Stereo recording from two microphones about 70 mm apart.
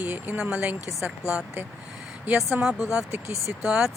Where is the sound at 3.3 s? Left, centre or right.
Left.